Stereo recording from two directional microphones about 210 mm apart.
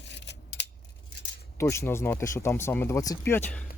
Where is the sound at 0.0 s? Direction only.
55° left (ahead or behind).